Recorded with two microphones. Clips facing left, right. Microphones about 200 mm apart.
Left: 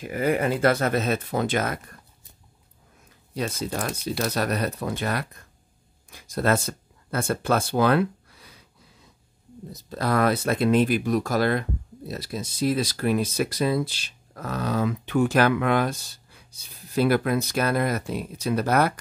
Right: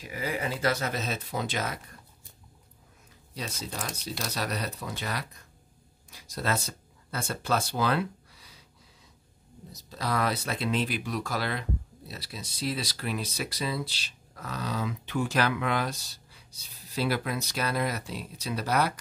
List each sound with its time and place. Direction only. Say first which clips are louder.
0.0 s speech: left 9 dB; 55° left (ahead or behind)
3.3 s speech: left 9 dB; 55° left (ahead or behind)
9.7 s speech: left 6 dB; 55° left (ahead or behind)